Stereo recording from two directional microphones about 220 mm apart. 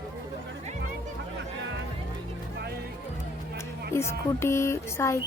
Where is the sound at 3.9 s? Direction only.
10° left (ahead or behind).